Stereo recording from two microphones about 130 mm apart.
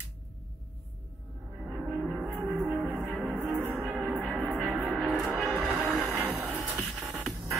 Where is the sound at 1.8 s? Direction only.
10° right (ahead or behind).